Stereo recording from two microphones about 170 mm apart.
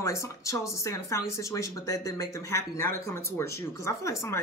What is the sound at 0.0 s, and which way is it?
Speech, 15° left (ahead or behind).